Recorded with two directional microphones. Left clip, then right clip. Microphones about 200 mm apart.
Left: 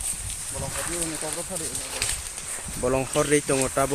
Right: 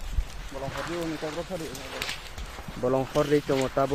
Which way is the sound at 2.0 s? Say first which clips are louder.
Left 3 dB; 45° right (ahead or behind).